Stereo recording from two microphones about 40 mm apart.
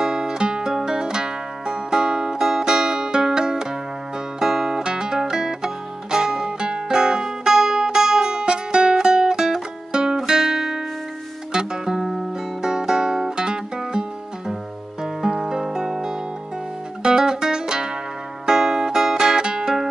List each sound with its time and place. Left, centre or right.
0.0 s music: centre
12.0 s music: centre
12.6 s music: centre
15.2 s music: centre